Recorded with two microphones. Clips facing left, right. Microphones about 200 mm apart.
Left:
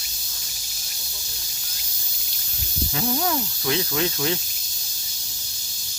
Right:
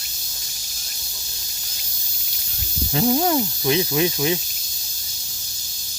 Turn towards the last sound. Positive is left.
turn(degrees=-15)  # may be behind; listen again after turning